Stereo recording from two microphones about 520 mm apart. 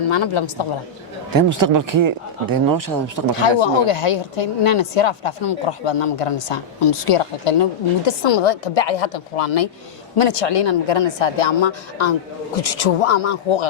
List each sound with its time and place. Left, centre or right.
0.0 s a woman's voice: left
1.3 s speech: right
3.6 s a woman's voice: left
12.5 s speech: left